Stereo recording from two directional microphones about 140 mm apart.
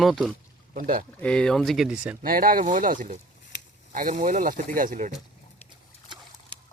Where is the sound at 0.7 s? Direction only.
75° right (ahead or behind).